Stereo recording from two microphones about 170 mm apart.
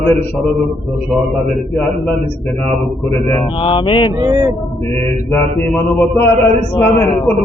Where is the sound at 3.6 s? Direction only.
30° left (ahead or behind).